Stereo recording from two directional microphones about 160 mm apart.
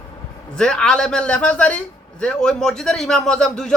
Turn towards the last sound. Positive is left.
turn(degrees=5)  # may be behind; listen again after turning